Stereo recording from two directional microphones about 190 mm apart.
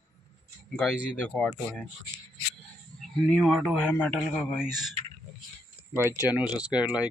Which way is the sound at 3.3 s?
Centre (ahead or behind).